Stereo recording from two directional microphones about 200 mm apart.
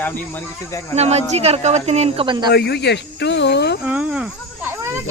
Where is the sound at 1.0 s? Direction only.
30° right (ahead or behind).